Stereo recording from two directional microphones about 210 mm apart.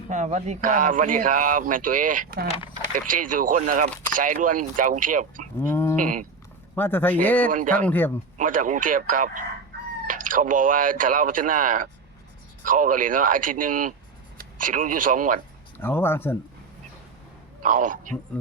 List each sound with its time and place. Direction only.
0.1 s speech: 35° right (ahead or behind)
5.5 s sheep: 10° left (ahead or behind)
6.0 s speech: 40° right (ahead or behind)
6.7 s speech: 10° left (ahead or behind)
8.4 s speech: 40° right (ahead or behind)
15.8 s speech: 10° left (ahead or behind)
17.6 s speech: 40° right (ahead or behind)